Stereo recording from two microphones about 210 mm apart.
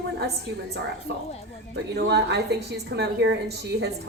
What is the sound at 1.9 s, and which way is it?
A woman's voice, 55° right (ahead or behind).